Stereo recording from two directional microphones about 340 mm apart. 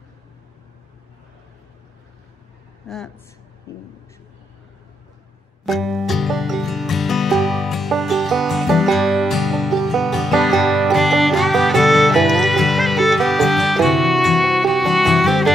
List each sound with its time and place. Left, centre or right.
5.7 s music: centre